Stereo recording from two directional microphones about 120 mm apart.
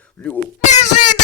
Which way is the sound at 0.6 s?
75° left (ahead or behind).